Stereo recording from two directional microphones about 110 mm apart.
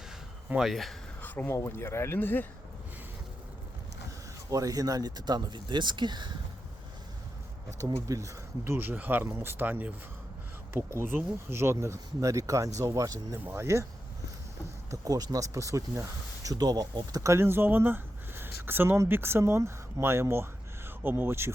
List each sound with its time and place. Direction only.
0.4 s speech: 5° right (ahead or behind)
1.2 s speech: 15° left (ahead or behind)
4.5 s speech: 35° right (ahead or behind)
7.8 s speech: 30° right (ahead or behind)
13.4 s speech: 20° right (ahead or behind)
14.8 s speech: 35° right (ahead or behind)